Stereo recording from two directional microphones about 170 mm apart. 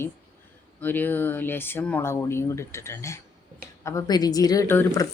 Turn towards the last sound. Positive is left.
turn(degrees=15)  # may be behind; listen again after turning